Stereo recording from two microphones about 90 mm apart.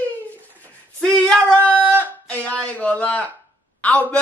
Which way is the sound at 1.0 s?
10° left (ahead or behind).